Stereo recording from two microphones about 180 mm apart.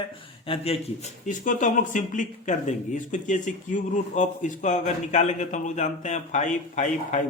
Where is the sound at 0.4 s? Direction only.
30° left (ahead or behind).